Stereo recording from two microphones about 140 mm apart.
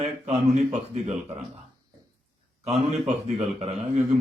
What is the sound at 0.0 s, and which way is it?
A man's voice, 55° right (ahead or behind).